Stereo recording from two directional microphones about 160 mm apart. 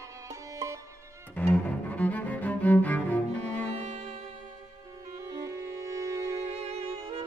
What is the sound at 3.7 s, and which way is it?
Music, 40° right (ahead or behind).